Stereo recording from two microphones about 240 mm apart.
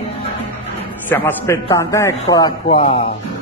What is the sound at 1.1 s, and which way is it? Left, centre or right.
Speech, centre.